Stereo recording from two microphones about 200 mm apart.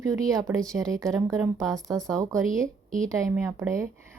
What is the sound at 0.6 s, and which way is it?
Speech, 5° left (ahead or behind).